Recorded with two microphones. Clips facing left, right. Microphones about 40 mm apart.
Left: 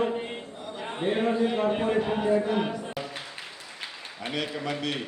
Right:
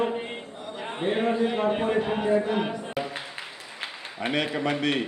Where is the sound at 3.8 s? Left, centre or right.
Right.